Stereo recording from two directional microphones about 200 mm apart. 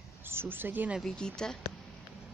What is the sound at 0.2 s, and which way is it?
Speech, 10° right (ahead or behind).